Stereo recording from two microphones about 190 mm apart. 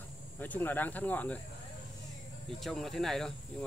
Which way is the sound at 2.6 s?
Centre (ahead or behind).